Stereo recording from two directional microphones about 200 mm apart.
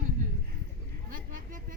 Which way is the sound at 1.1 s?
40° right (ahead or behind).